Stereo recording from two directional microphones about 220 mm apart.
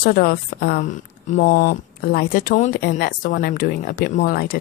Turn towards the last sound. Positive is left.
turn(degrees=40)  # may be behind; listen again after turning